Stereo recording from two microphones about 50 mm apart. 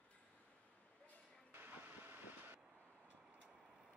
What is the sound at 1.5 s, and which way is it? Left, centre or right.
Vehicle, right.